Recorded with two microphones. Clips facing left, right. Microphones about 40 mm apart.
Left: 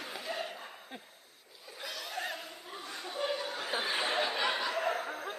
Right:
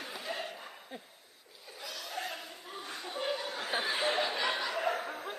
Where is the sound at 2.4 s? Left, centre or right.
Centre.